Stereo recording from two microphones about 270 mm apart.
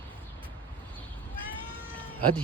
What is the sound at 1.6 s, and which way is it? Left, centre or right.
Cat, centre.